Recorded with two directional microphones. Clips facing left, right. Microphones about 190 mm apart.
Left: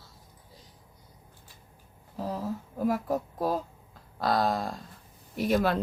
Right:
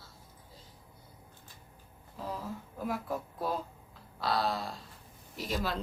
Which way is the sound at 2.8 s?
40° left (ahead or behind).